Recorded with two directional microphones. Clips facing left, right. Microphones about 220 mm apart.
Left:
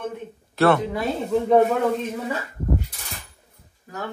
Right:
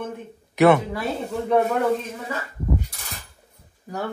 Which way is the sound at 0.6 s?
20° right (ahead or behind).